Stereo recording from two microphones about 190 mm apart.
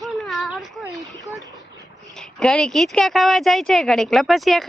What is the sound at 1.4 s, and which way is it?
Boat, 20° right (ahead or behind).